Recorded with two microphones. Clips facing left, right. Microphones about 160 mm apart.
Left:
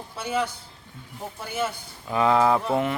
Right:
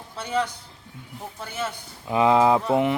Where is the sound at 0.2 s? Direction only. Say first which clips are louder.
Right 1 dB; 5° left (ahead or behind).